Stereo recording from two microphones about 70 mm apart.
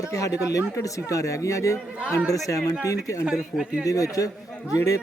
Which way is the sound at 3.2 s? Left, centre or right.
Centre.